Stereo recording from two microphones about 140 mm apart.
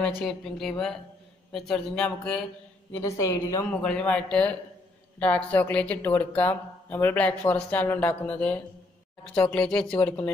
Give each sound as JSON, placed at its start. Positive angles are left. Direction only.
{"t": 0.0, "sound": "speech", "side_deg": 5}
{"t": 2.9, "sound": "a woman's voice", "side_deg": 20}
{"t": 3.8, "sound": "speech", "side_deg": 10}